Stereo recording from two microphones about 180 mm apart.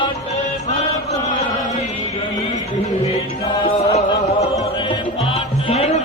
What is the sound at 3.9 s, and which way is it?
Music, 40° left (ahead or behind).